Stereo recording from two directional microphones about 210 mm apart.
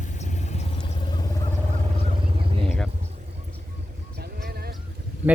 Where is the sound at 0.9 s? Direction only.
20° left (ahead or behind).